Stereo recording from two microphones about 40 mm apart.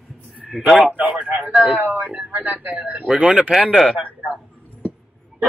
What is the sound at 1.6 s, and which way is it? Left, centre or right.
Speech, right.